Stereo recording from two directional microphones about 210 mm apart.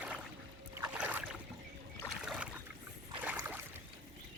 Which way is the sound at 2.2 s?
5° right (ahead or behind).